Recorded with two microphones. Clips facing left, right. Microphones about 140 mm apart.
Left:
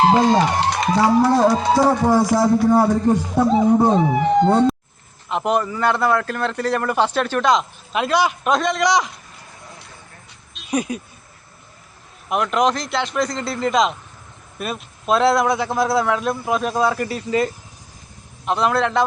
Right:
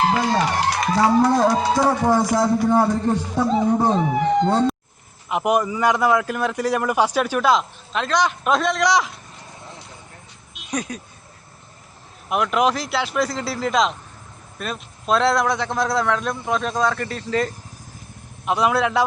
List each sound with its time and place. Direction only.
0.0 s speech: 25° left (ahead or behind)
1.2 s music: 5° left (ahead or behind)
5.3 s a man's voice: 10° right (ahead or behind)
7.9 s a man's voice: 10° left (ahead or behind)
10.7 s music: 10° left (ahead or behind)
12.3 s a man's voice: centre (ahead or behind)
18.4 s a man's voice: 10° right (ahead or behind)